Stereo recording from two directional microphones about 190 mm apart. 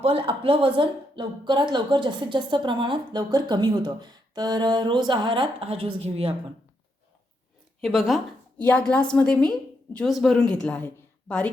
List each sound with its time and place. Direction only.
0.0 s a woman's voice: 30° right (ahead or behind)
7.8 s a woman's voice: centre (ahead or behind)